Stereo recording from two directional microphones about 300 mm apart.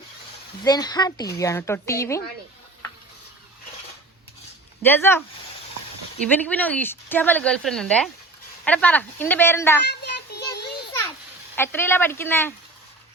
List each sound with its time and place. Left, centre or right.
0.6 s speech: centre
4.8 s speech: centre
6.2 s speech: centre
9.8 s a sound: left
11.5 s speech: centre